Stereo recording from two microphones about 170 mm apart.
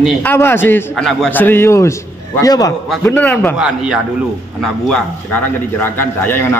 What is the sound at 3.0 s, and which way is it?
Speech, 10° left (ahead or behind).